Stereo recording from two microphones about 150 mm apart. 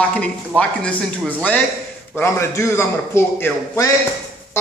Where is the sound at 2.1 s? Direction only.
15° left (ahead or behind).